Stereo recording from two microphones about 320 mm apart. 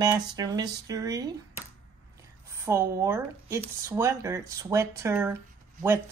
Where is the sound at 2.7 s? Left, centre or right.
Centre.